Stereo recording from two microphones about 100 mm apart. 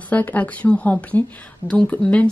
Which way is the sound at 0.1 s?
15° left (ahead or behind).